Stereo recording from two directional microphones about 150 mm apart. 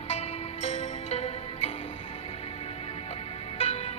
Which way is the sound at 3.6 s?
45° left (ahead or behind).